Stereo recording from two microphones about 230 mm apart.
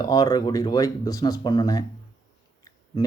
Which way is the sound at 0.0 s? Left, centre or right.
Centre.